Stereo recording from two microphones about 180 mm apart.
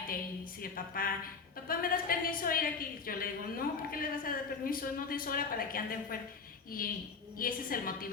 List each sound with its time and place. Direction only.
0.6 s a woman's voice: 55° left (ahead or behind)
7.3 s a woman's voice: 55° left (ahead or behind)